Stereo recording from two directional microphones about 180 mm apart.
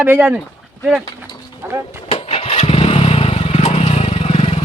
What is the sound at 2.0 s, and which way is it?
Vehicle, 35° left (ahead or behind).